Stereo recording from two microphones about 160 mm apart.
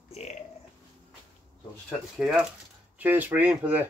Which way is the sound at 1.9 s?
5° right (ahead or behind).